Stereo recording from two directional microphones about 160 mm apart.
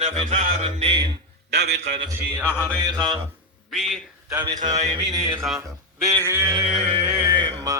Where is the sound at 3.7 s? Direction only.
Centre (ahead or behind).